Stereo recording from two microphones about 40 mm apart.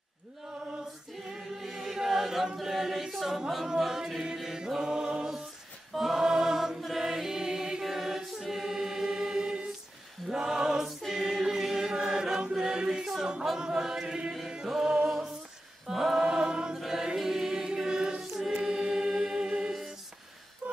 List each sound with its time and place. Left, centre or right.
1.2 s choir: centre
6.8 s music: centre
7.8 s choir: centre
11.1 s chant: centre
14.7 s music: centre
15.9 s choir: centre
16.8 s music: centre
17.7 s choir: centre
18.7 s music: centre
20.6 s a sound: right